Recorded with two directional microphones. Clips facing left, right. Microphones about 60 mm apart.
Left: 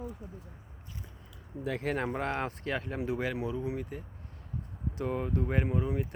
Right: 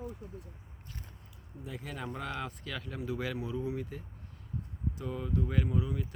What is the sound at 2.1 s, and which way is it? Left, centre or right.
Speech, left.